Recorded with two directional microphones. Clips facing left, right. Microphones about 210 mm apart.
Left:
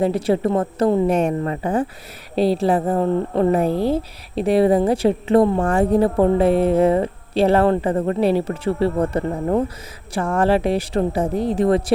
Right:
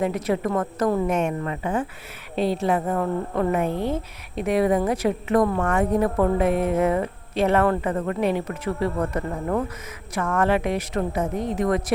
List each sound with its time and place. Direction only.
0.0 s a woman's voice: 30° left (ahead or behind)